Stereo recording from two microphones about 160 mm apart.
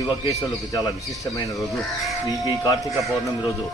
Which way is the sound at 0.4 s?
20° left (ahead or behind).